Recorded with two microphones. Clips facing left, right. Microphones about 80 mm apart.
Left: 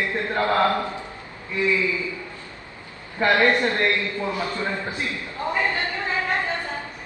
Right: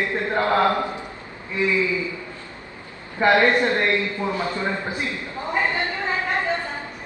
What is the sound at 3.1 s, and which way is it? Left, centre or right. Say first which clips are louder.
A man's voice: right 2 dB; centre.